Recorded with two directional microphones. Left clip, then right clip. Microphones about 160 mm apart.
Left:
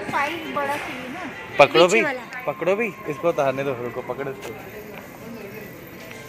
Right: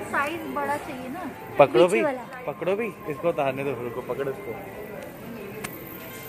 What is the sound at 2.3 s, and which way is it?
Speech, 45° left (ahead or behind).